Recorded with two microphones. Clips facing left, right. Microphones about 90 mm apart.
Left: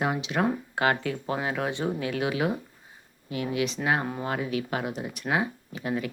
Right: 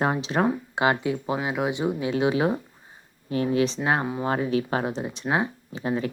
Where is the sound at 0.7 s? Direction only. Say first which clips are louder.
Right 3 dB; 20° right (ahead or behind).